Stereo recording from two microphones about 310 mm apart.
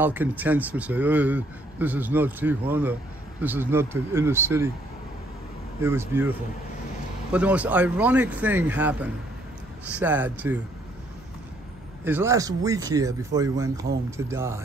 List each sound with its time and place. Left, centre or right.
0.0 s speech: centre
5.8 s speech: centre
7.3 s speech: centre
12.0 s speech: centre